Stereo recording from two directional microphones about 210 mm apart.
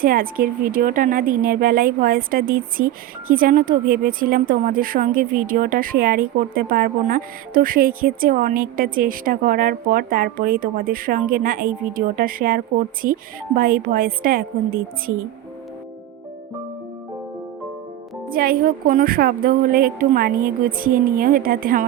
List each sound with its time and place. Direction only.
0.0 s a woman's voice: 45° right (ahead or behind)
18.3 s a woman's voice: 45° right (ahead or behind)